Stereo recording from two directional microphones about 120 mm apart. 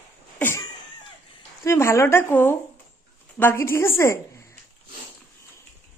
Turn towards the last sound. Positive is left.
turn(degrees=25)  # may be behind; listen again after turning